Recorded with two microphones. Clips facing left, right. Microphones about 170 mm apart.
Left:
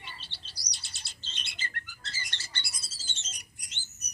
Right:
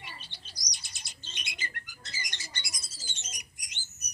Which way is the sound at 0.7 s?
10° right (ahead or behind).